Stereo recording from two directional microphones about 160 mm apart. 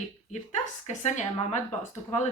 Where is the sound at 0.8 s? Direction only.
45° left (ahead or behind).